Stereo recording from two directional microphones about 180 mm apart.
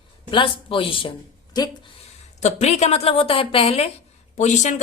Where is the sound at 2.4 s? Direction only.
35° left (ahead or behind).